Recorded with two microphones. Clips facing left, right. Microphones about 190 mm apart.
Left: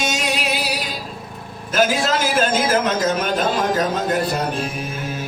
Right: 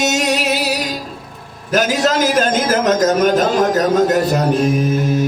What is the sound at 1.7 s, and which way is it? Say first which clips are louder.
A man's voice: right 3 dB; 40° right (ahead or behind).